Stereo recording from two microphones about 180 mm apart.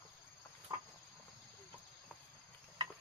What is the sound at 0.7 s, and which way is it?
Cricket, 25° right (ahead or behind).